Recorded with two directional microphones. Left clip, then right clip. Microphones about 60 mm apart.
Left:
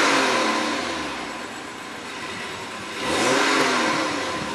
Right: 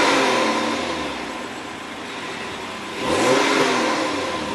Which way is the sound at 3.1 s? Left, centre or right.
Centre.